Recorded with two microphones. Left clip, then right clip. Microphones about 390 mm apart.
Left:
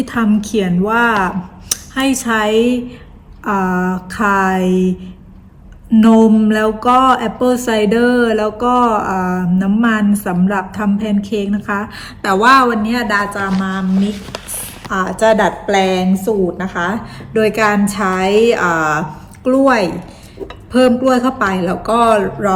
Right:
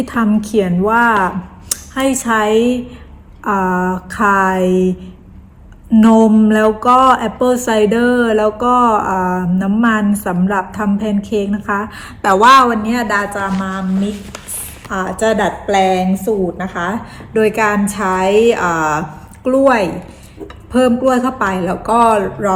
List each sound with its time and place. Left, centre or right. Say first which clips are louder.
0.0 s speech: even; centre